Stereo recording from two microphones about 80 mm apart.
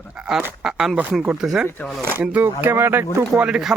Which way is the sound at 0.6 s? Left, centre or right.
Centre.